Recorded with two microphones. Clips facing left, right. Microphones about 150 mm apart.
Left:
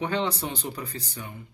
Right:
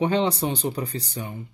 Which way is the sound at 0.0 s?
20° right (ahead or behind).